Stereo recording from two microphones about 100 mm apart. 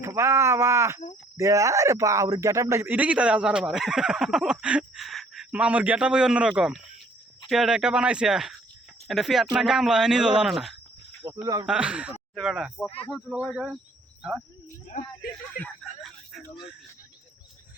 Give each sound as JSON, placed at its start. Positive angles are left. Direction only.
{"t": 0.0, "sound": "speech", "side_deg": -30}
{"t": 5.5, "sound": "speech", "side_deg": -15}
{"t": 11.2, "sound": "speech", "side_deg": -35}
{"t": 11.6, "sound": "speech", "side_deg": -10}
{"t": 15.8, "sound": "a sound", "side_deg": 0}